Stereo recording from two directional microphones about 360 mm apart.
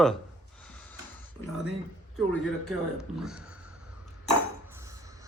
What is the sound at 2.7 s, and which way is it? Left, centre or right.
Speech, centre.